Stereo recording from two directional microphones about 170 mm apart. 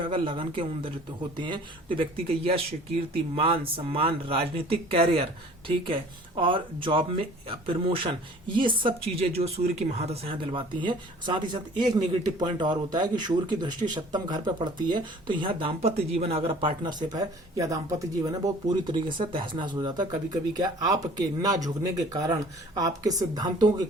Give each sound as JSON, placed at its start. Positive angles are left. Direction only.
{"t": 0.0, "sound": "speech", "side_deg": -30}